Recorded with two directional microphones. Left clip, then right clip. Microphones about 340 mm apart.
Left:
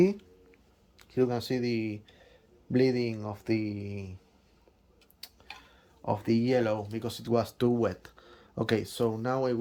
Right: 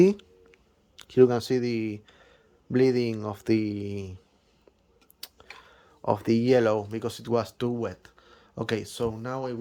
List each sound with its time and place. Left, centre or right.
0.0 s speech: centre
5.2 s tick-tock: centre
6.1 s speech: centre